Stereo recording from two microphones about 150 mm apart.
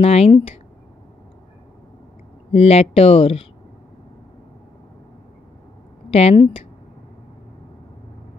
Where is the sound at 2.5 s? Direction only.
40° left (ahead or behind).